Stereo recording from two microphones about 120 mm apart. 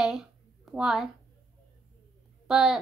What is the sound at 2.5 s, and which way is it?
Speech, 5° right (ahead or behind).